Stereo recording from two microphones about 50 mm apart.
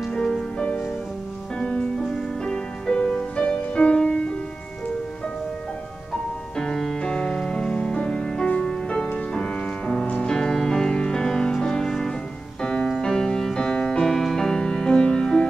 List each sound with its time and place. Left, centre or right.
0.1 s music: centre
6.5 s music: centre